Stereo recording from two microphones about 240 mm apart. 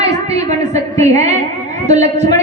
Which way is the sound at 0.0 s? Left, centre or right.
Right.